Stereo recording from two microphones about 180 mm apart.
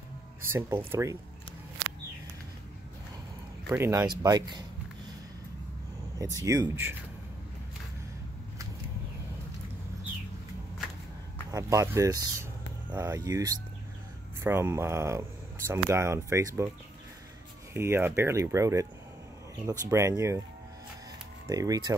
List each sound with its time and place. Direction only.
0.4 s speech: 15° right (ahead or behind)
3.6 s speech: 20° right (ahead or behind)
6.4 s speech: 15° right (ahead or behind)
11.5 s speech: 15° right (ahead or behind)
17.7 s speech: 15° right (ahead or behind)
19.9 s speech: 15° right (ahead or behind)
21.5 s speech: 20° right (ahead or behind)